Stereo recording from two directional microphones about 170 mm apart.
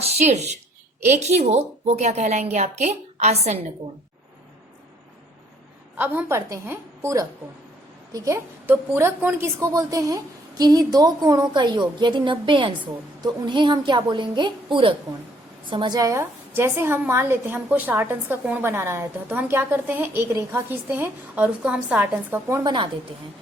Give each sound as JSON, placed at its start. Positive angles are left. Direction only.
{"t": 0.0, "sound": "a woman's voice", "side_deg": -40}
{"t": 6.0, "sound": "a woman's voice", "side_deg": -15}